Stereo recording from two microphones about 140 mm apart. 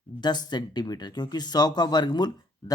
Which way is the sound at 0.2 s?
30° left (ahead or behind).